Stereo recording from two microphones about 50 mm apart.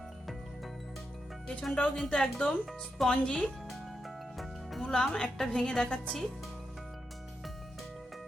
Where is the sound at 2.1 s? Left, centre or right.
Centre.